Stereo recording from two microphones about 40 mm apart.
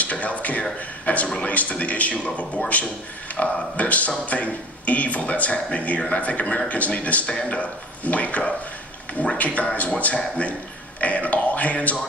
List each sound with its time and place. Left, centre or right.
0.0 s a man's voice: left